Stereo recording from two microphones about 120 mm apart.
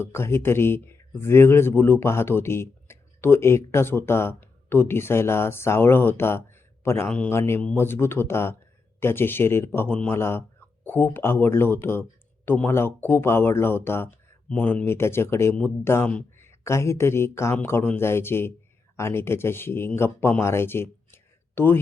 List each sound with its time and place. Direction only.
0.0 s speech: 20° left (ahead or behind)
7.1 s speech: 10° left (ahead or behind)
7.3 s speech: 20° left (ahead or behind)
15.5 s speech: 10° left (ahead or behind)
16.4 s speech: 20° left (ahead or behind)